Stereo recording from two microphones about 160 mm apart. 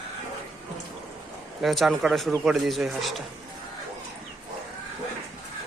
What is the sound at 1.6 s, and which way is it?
Speech, centre (ahead or behind).